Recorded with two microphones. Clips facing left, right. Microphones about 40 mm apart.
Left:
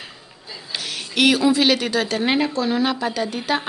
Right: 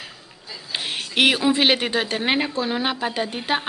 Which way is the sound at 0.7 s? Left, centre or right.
Right.